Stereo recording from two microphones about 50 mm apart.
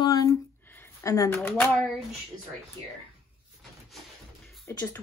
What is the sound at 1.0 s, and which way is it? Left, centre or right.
Speech, left.